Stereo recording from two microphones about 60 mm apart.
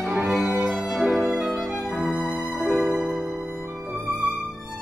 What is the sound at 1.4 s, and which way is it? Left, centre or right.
Violin, centre.